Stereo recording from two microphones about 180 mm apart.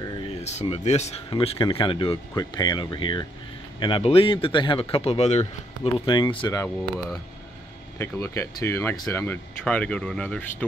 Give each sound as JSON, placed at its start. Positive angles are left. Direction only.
{"t": 0.0, "sound": "speech", "side_deg": 25}
{"t": 5.9, "sound": "speech", "side_deg": 25}
{"t": 8.0, "sound": "speech", "side_deg": 15}